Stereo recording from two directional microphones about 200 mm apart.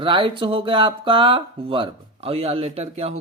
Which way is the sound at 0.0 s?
25° right (ahead or behind).